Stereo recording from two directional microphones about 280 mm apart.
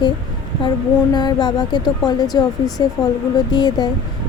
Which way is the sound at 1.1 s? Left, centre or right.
Centre.